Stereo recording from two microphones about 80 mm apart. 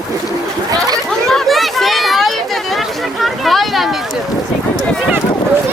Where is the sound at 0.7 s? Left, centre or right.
Right.